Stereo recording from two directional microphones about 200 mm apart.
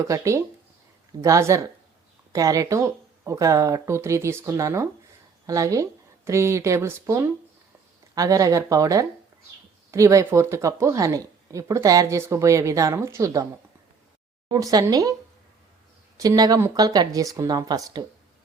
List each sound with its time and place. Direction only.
0.0 s speech: 15° right (ahead or behind)
14.5 s speech: 20° right (ahead or behind)
16.1 s speech: 20° right (ahead or behind)